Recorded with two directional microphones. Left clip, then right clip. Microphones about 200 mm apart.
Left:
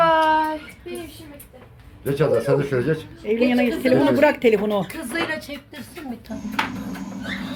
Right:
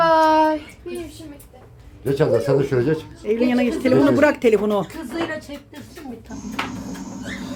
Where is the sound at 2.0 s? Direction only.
65° right (ahead or behind).